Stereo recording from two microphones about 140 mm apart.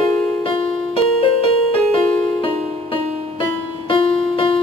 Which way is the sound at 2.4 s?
40° left (ahead or behind).